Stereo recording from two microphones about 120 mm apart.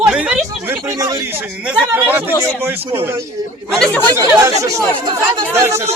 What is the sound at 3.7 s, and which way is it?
Speech, 5° left (ahead or behind).